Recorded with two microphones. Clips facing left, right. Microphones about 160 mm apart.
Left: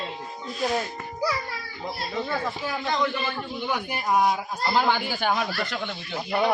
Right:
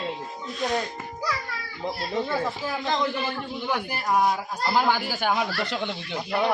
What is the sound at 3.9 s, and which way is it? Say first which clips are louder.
Speech: left 1 dB; 5° left (ahead or behind).